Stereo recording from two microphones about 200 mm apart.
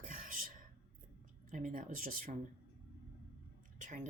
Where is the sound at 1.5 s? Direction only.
40° right (ahead or behind).